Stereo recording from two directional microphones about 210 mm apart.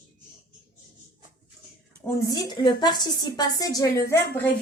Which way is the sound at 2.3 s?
20° left (ahead or behind).